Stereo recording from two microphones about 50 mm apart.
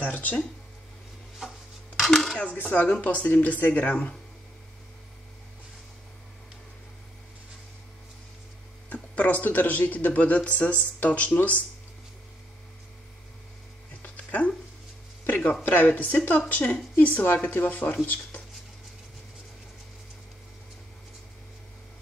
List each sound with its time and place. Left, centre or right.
0.0 s speech: left
1.4 s rub: centre
2.0 s dishes: centre
2.3 s speech: left
8.8 s a sound: left
9.4 s speech: left
14.0 s music: left
15.2 s speech: left